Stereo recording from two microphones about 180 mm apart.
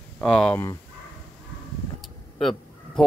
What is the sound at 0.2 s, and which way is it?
Speech, 5° left (ahead or behind).